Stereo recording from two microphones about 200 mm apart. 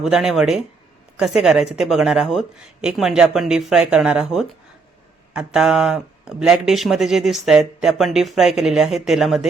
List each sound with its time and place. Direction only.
0.0 s speech: 5° right (ahead or behind)